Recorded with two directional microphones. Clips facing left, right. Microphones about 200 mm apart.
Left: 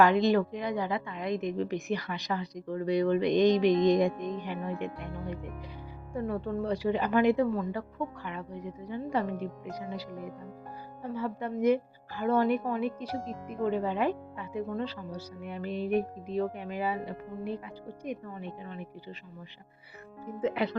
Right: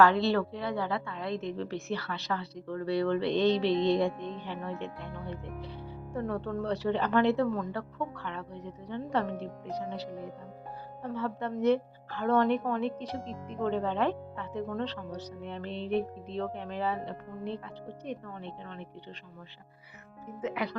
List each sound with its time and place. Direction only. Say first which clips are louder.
0.0 s a woman's voice: left 1 dB; 15° left (ahead or behind)
20.4 s speech: left 4 dB; 30° left (ahead or behind)